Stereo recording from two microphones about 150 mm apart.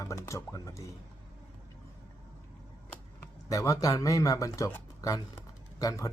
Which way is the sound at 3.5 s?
20° left (ahead or behind).